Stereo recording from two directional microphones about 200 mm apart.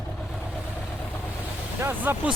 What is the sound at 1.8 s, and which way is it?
Vehicle, 10° right (ahead or behind).